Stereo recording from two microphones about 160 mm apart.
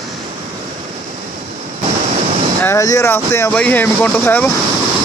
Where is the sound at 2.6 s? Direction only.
20° left (ahead or behind).